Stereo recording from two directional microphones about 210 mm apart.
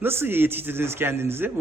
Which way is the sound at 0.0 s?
10° right (ahead or behind).